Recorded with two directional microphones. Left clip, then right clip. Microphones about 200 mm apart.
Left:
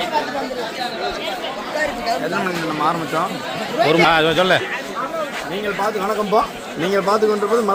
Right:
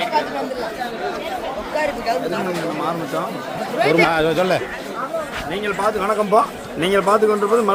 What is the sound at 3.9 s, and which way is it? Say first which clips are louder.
Speech: left 2 dB; centre (ahead or behind).